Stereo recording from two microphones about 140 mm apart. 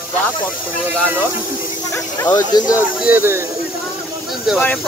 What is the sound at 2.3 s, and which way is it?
Speech, 30° left (ahead or behind).